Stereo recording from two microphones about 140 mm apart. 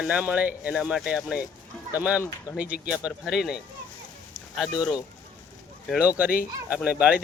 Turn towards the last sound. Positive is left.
turn(degrees=-10)  # may be behind; listen again after turning